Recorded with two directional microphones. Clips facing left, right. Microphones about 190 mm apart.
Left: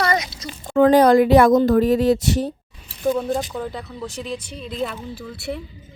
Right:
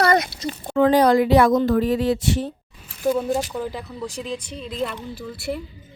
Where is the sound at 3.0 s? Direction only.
5° right (ahead or behind).